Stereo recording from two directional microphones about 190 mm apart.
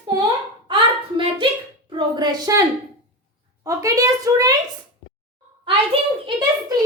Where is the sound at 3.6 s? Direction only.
15° right (ahead or behind).